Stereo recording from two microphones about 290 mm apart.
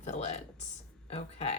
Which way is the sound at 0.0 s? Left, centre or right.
Left.